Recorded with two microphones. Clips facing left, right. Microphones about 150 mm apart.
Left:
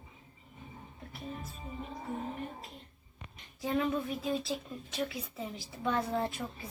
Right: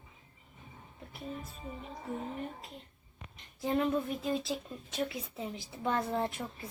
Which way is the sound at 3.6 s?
Centre (ahead or behind).